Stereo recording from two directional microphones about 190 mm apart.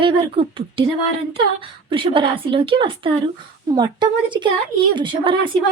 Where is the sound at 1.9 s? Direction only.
25° right (ahead or behind).